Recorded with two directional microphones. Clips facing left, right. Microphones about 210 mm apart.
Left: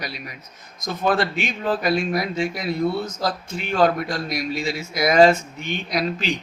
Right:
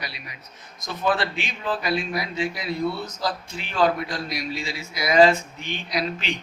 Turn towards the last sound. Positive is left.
turn(degrees=40)  # may be behind; listen again after turning